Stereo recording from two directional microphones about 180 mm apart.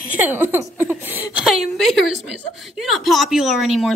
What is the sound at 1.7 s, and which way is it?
A woman's voice, centre (ahead or behind).